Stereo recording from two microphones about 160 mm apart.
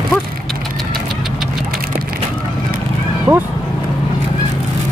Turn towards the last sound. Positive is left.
turn(degrees=-15)  # may be behind; listen again after turning